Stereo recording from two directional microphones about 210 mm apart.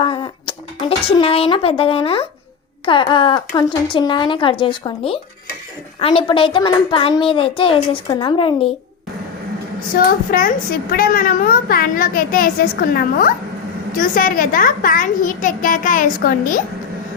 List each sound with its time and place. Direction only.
0.0 s a child's voice: 25° left (ahead or behind)
9.9 s a woman's voice: 40° left (ahead or behind)